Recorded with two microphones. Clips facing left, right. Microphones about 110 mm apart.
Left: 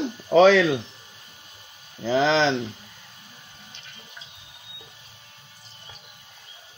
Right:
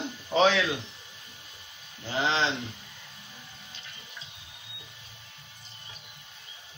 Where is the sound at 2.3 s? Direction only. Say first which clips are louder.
Left 5 dB; 90° left.